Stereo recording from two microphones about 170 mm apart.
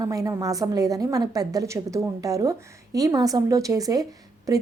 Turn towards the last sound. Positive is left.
turn(degrees=-20)  # may be behind; listen again after turning